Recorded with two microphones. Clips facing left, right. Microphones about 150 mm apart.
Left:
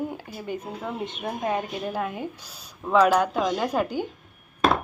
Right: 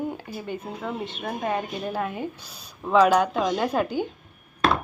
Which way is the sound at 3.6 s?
10° left (ahead or behind).